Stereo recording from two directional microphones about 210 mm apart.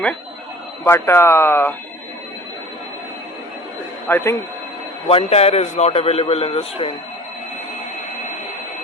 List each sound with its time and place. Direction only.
0.9 s speech: 10° left (ahead or behind)
4.1 s speech: 10° left (ahead or behind)
5.0 s a man's voice: 30° left (ahead or behind)